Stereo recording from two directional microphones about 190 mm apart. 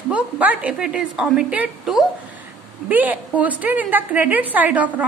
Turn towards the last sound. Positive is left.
turn(degrees=-5)  # may be behind; listen again after turning